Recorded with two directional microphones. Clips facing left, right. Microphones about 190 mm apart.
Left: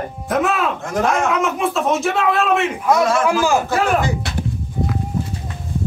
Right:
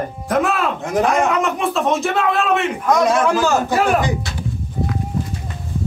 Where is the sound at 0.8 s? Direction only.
15° right (ahead or behind).